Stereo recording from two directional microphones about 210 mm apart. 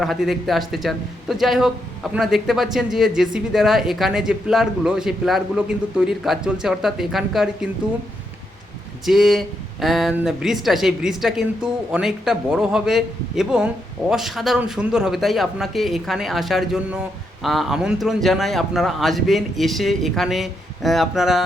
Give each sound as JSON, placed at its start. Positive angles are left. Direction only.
{"t": 0.0, "sound": "speech", "side_deg": 0}
{"t": 9.0, "sound": "speech", "side_deg": 0}